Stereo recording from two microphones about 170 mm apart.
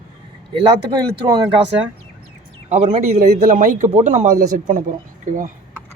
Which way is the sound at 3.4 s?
55° right (ahead or behind).